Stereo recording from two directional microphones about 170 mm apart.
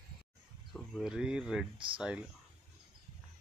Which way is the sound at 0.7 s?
5° right (ahead or behind).